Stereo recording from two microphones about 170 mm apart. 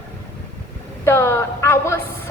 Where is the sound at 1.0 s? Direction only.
15° left (ahead or behind).